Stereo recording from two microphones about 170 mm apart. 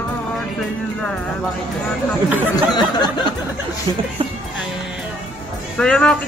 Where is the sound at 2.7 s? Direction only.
25° left (ahead or behind).